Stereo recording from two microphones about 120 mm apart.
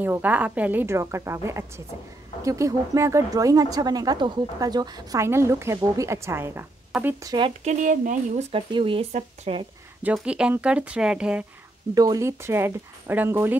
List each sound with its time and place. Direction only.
0.0 s speech: 15° right (ahead or behind); by 5.2 s 35° right (ahead or behind)
5.2 s speech: 25° right (ahead or behind)
6.9 s speech: 5° right (ahead or behind)
7.2 s speech: 40° right (ahead or behind)
7.6 s speech: 90° right; by 8.6 s 60° right (ahead or behind)
8.7 s speech: 45° right (ahead or behind)
10.1 s speech: 10° right (ahead or behind)
11.9 s speech: 30° right (ahead or behind)